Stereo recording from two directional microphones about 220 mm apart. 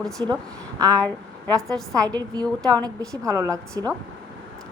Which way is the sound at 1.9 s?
15° right (ahead or behind).